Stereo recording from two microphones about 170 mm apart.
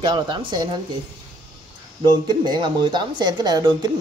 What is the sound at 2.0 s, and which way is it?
Speech, 25° right (ahead or behind).